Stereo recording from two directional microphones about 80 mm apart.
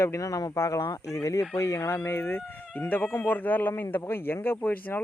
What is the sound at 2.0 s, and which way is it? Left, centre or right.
Speech, left.